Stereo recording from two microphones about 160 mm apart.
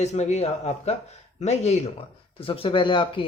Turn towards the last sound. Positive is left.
turn(degrees=30)  # may be behind; listen again after turning